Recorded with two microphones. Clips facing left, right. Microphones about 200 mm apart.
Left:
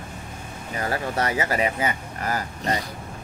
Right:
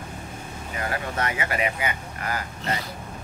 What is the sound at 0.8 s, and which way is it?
Speech, 35° left (ahead or behind).